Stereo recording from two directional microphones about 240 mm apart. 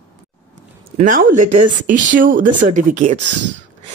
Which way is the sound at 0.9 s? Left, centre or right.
Right.